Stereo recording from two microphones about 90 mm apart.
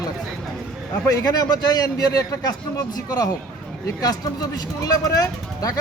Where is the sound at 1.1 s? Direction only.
40° left (ahead or behind).